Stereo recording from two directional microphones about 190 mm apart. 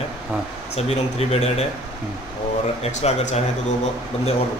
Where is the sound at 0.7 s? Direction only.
35° left (ahead or behind).